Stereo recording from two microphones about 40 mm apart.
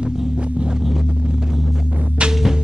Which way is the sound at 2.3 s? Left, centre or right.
Centre.